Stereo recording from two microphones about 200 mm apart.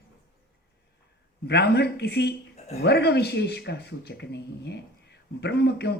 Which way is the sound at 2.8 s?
55° left (ahead or behind).